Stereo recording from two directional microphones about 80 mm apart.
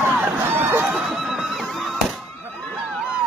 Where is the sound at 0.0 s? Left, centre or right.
Right.